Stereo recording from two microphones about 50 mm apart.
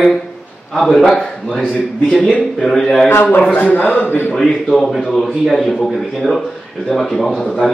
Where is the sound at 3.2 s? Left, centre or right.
Left.